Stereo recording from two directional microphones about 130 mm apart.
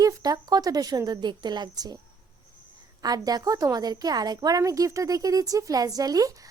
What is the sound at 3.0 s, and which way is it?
A woman's voice, 30° right (ahead or behind).